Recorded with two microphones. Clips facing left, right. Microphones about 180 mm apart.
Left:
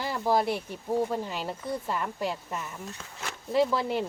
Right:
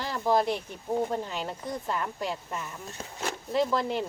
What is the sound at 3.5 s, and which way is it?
Speech, 5° left (ahead or behind).